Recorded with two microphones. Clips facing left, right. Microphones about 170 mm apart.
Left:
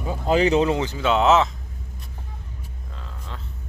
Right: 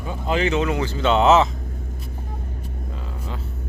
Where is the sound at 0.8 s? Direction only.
15° left (ahead or behind).